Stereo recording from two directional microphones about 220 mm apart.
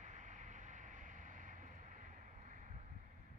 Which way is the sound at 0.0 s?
35° right (ahead or behind).